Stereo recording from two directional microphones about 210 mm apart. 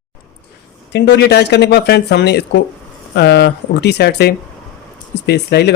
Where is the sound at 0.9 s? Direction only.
55° left (ahead or behind).